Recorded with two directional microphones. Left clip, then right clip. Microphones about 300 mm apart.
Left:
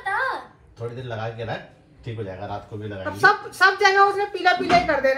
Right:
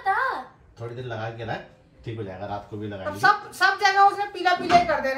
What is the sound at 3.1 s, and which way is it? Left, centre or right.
A woman's voice, left.